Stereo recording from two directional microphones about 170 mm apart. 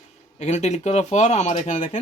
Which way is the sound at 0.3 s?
40° left (ahead or behind).